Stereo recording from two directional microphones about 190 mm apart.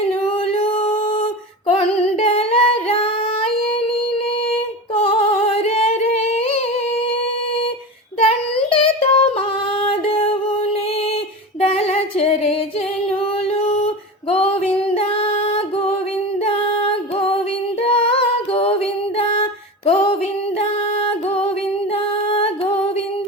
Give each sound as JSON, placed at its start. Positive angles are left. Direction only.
{"t": 0.3, "sound": "singing", "side_deg": 30}
{"t": 4.9, "sound": "female singing", "side_deg": 30}
{"t": 8.2, "sound": "child singing", "side_deg": 30}
{"t": 9.8, "sound": "music", "side_deg": 30}
{"t": 11.6, "sound": "female singing", "side_deg": 30}
{"t": 13.1, "sound": "music", "side_deg": 30}
{"t": 17.8, "sound": "female singing", "side_deg": 30}
{"t": 20.6, "sound": "music", "side_deg": 30}
{"t": 21.9, "sound": "female singing", "side_deg": 30}